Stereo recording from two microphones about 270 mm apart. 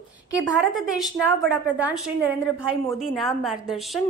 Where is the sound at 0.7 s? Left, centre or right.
Centre.